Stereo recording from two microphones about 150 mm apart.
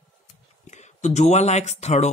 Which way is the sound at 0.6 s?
50° left (ahead or behind).